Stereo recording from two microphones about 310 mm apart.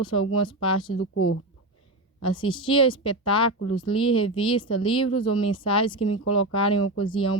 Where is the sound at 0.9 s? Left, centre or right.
Left.